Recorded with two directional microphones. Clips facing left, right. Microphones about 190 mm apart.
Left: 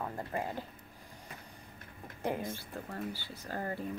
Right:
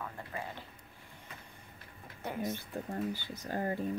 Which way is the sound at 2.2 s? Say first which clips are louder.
Left 2 dB; 30° left (ahead or behind).